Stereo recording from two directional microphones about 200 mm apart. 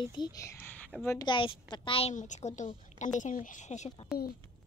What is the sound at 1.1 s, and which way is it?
A woman's voice, 25° left (ahead or behind).